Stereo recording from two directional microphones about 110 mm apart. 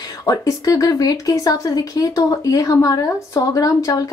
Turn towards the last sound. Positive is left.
turn(degrees=30)  # may be behind; listen again after turning